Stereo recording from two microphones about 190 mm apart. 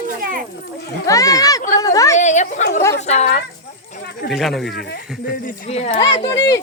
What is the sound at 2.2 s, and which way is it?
Speech, 40° left (ahead or behind).